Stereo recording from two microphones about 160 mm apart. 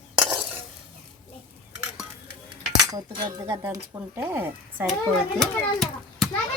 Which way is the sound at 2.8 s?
25° right (ahead or behind).